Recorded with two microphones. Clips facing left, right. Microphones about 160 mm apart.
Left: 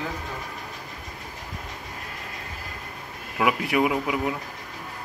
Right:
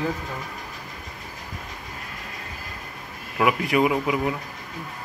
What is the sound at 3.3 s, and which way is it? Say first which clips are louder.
Speech: right 2 dB; 5° left (ahead or behind).